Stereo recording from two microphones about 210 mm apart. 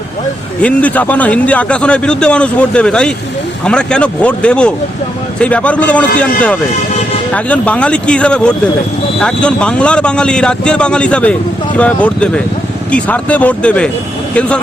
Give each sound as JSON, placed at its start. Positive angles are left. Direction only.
{"t": 0.6, "sound": "a man's voice", "side_deg": 5}
{"t": 7.3, "sound": "a man's voice", "side_deg": 5}